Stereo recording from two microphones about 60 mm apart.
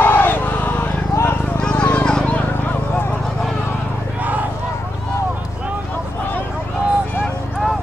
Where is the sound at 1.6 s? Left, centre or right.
Centre.